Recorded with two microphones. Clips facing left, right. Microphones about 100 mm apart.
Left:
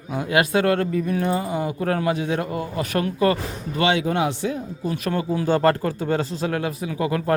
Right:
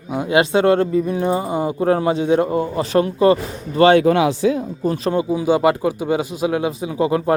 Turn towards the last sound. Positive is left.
turn(degrees=-20)  # may be behind; listen again after turning